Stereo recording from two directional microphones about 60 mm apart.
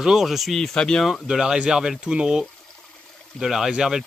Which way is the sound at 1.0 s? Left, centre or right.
Centre.